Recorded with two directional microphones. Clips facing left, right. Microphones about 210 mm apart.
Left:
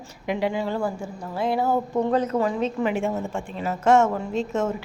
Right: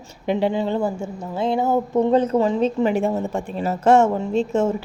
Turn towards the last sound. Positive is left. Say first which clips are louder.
# right 5 dB
turn(degrees=-30)  # may be behind; listen again after turning